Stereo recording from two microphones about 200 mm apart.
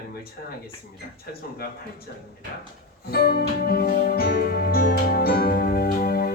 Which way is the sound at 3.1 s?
50° left (ahead or behind).